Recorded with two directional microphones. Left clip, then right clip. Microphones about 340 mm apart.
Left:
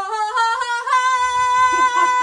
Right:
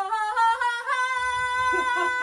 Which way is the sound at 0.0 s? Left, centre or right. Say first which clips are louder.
Left 4 dB; centre.